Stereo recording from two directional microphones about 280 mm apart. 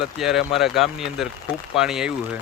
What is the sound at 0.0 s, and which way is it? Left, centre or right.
Speech, centre.